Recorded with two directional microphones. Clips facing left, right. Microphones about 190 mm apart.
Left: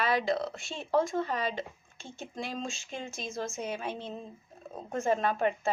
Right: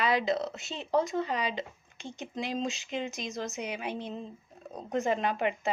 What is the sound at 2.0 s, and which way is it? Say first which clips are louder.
Speech: right 3 dB; 15° right (ahead or behind).